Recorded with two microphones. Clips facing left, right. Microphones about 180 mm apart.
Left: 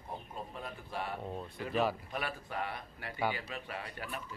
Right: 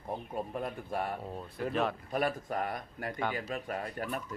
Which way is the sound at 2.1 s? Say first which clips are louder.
Right 7 dB; 45° right (ahead or behind).